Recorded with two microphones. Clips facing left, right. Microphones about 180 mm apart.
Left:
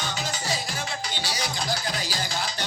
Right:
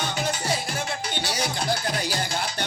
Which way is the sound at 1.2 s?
55° right (ahead or behind).